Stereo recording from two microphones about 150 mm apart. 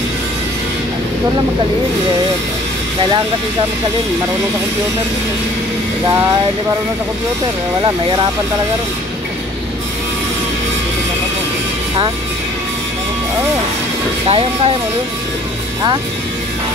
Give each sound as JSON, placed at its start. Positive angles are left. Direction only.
{"t": 14.2, "sound": "speech", "side_deg": -40}